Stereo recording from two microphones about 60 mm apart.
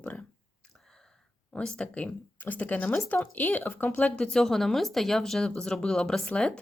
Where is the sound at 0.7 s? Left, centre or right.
Centre.